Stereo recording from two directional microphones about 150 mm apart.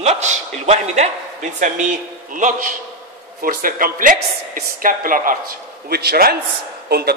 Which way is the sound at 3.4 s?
70° right (ahead or behind).